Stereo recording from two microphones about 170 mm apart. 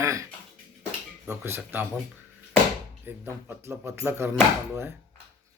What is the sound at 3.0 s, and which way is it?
Speech, 10° right (ahead or behind).